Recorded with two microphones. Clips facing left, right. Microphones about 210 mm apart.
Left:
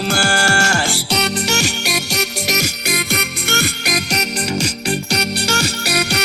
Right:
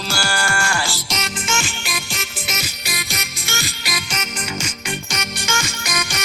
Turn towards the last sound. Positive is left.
turn(degrees=65)  # may be behind; listen again after turning